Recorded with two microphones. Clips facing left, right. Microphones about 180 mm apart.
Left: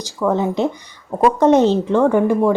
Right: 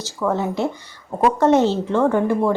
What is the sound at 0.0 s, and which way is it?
A woman's voice, 15° left (ahead or behind).